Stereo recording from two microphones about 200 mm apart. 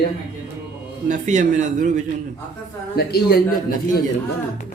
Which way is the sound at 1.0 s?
35° right (ahead or behind).